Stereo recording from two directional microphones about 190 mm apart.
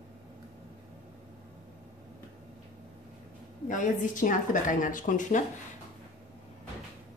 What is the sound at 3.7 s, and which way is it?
A woman's voice, 45° left (ahead or behind).